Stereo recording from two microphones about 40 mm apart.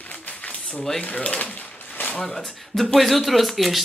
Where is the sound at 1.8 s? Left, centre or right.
Left.